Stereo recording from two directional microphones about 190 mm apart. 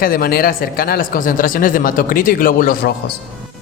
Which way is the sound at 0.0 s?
50° left (ahead or behind).